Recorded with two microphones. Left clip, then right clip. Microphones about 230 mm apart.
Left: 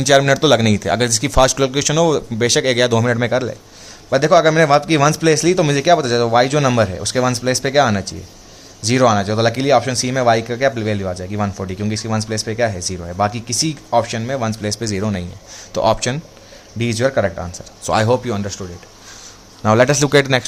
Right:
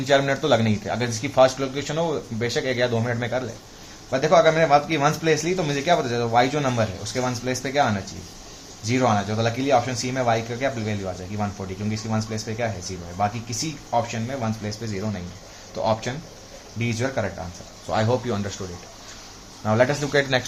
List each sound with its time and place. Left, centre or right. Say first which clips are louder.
0.0 s a man's voice: left 8 dB; left
17.8 s speech: left 7 dB; left
19.6 s a man's voice: left 8 dB; left